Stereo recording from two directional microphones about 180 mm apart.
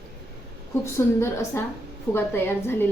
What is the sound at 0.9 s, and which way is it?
A woman's voice, 15° left (ahead or behind).